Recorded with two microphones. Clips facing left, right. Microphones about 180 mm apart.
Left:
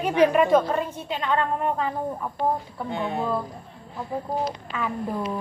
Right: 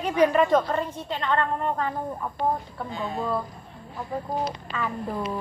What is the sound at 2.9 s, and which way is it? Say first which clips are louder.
Speech: left 4 dB; 65° left (ahead or behind).